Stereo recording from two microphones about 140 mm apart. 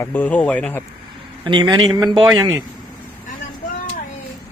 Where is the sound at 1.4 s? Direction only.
35° right (ahead or behind).